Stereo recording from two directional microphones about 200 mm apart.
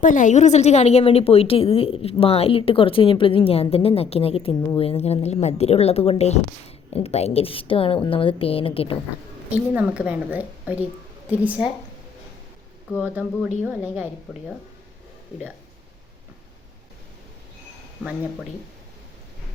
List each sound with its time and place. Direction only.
0.0 s a woman's voice: 40° left (ahead or behind)
9.5 s a woman's voice: 5° right (ahead or behind)
13.6 s a woman's voice: 5° right (ahead or behind)